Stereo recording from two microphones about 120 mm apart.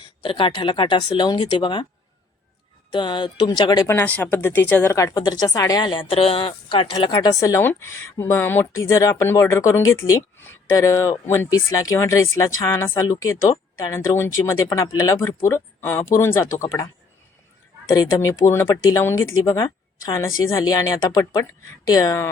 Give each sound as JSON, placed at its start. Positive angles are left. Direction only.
{"t": 0.2, "sound": "speech", "side_deg": 45}
{"t": 2.9, "sound": "speech", "side_deg": 40}
{"t": 3.8, "sound": "speech", "side_deg": 15}
{"t": 5.1, "sound": "speech", "side_deg": 35}
{"t": 7.1, "sound": "speech", "side_deg": 35}